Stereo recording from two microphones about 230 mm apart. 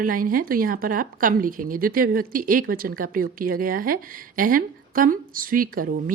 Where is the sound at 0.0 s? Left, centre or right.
Right.